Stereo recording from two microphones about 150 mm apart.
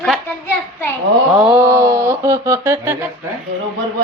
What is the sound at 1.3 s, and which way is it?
Speech, 5° right (ahead or behind).